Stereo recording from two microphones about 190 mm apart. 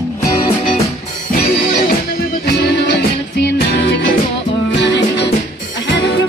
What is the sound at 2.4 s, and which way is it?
Music, 60° left (ahead or behind).